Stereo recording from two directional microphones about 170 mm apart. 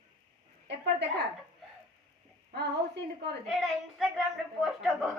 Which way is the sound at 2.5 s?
75° right (ahead or behind).